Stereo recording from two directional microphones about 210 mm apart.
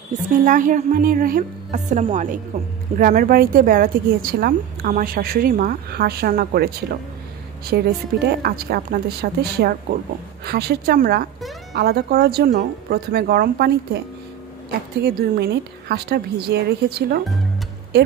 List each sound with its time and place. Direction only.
0.5 s a woman's voice: 40° right (ahead or behind)
3.0 s a woman's voice: 45° right (ahead or behind)
7.7 s a woman's voice: 50° right (ahead or behind)